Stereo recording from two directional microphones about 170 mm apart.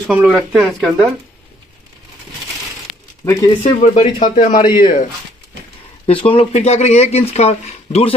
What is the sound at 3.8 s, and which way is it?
A man's voice, 40° left (ahead or behind).